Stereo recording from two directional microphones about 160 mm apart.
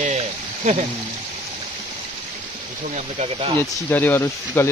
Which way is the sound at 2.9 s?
45° right (ahead or behind).